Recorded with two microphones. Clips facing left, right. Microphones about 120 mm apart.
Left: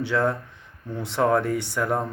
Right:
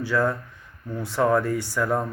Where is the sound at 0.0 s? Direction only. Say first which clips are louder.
Even; 25° left (ahead or behind).